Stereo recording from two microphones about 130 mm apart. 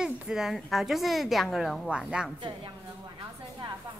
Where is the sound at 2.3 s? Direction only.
35° right (ahead or behind).